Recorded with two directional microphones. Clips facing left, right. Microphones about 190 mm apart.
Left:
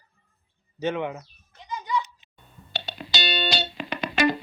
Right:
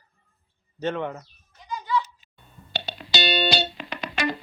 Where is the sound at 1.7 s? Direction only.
20° left (ahead or behind).